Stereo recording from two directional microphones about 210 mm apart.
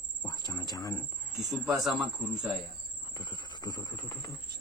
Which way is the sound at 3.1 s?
20° left (ahead or behind).